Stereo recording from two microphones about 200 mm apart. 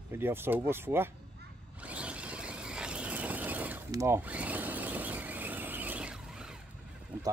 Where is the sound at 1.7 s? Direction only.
5° right (ahead or behind).